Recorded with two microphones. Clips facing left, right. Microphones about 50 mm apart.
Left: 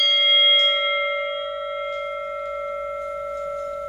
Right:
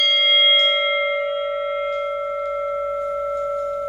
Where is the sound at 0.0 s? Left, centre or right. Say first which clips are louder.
Right 2 dB; centre.